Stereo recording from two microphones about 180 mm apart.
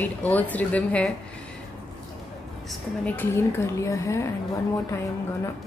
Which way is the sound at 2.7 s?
10° left (ahead or behind).